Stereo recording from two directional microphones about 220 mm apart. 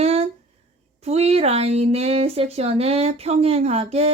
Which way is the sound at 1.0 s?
30° right (ahead or behind).